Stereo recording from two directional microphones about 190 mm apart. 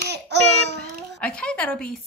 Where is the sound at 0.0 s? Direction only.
60° right (ahead or behind).